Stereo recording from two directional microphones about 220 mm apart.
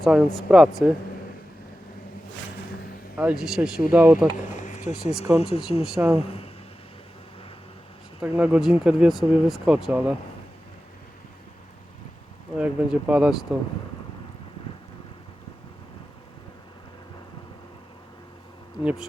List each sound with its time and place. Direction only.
0.0 s speech: 5° right (ahead or behind)
3.2 s speech: 5° right (ahead or behind)
4.5 s a sound: 35° left (ahead or behind)
5.4 s speech: 25° left (ahead or behind)
5.8 s speech: 5° right (ahead or behind)
6.1 s speech: 25° left (ahead or behind)
8.2 s speech: 5° right (ahead or behind)
12.5 s speech: 5° right (ahead or behind)
18.8 s speech: 5° right (ahead or behind)